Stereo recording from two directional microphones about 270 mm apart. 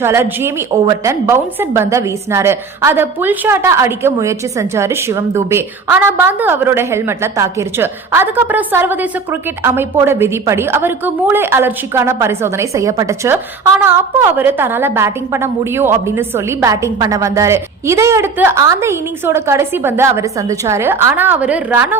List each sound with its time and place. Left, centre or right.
0.0 s a woman's voice: centre